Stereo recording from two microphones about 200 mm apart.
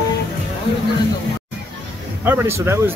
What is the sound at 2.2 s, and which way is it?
Speech, 10° right (ahead or behind).